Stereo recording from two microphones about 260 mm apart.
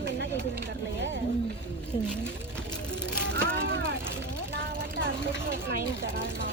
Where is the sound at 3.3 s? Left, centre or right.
Right.